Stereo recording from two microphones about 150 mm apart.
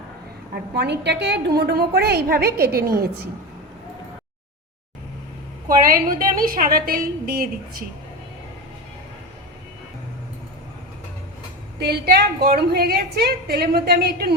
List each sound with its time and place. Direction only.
0.5 s a woman's voice: 90° right
5.6 s a woman's voice: 70° right (ahead or behind)
11.8 s a woman's voice: 90° right